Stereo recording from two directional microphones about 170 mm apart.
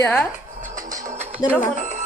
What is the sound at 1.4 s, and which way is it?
Speech, 25° left (ahead or behind).